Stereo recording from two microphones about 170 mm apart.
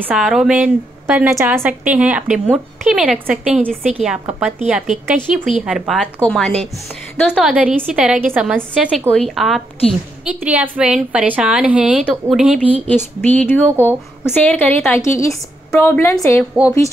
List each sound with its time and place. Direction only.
0.0 s a woman's voice: 5° right (ahead or behind)
13.2 s a woman's voice: 10° left (ahead or behind)